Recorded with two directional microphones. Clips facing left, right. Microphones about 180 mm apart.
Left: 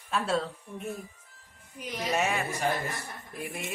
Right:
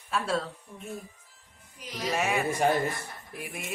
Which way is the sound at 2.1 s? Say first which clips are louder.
Even; centre (ahead or behind).